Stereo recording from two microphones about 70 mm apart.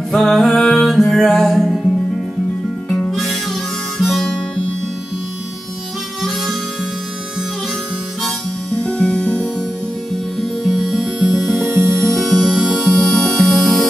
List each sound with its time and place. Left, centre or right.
0.1 s music: centre
2.9 s music: centre
4.0 s harmonica: centre
8.7 s music: centre
10.4 s music: centre
11.6 s music: right
12.1 s music: centre
12.4 s music: centre
12.7 s music: centre